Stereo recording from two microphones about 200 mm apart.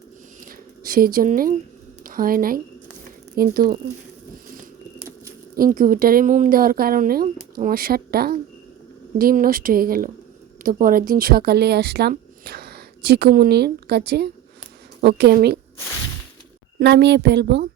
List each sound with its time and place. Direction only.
0.9 s speech: 45° right (ahead or behind)
5.5 s speech: 45° right (ahead or behind)
15.0 s speech: 55° right (ahead or behind)
16.8 s speech: 60° right (ahead or behind)